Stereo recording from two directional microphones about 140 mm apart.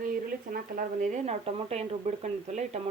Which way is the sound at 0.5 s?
80° right.